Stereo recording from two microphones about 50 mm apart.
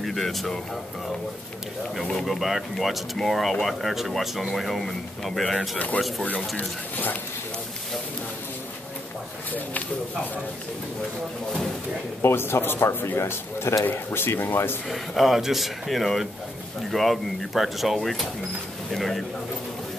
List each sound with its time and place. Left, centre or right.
0.0 s speech: centre
2.2 s speech: centre
12.2 s a man's voice: left
13.8 s speech: left
14.9 s speech: centre